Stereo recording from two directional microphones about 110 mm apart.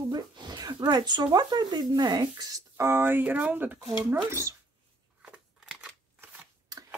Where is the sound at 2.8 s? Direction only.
20° right (ahead or behind).